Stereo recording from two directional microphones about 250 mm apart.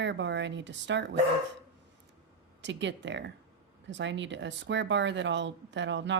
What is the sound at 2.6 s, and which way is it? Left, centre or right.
A woman's voice, right.